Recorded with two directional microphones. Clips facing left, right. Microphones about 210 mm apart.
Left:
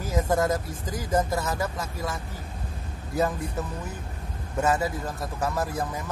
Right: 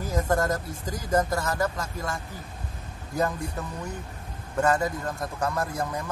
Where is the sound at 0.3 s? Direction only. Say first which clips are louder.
Left 1 dB; 5° left (ahead or behind).